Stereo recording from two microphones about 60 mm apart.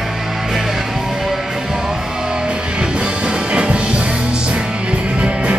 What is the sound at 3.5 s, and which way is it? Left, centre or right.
Music, centre.